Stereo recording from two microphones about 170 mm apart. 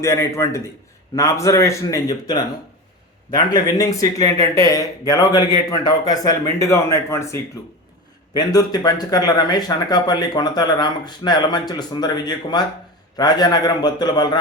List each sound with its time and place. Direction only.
0.0 s a man's voice: 15° left (ahead or behind)